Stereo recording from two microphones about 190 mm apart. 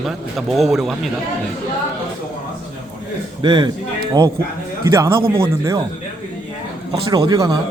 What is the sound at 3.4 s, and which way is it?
Speech, 25° right (ahead or behind).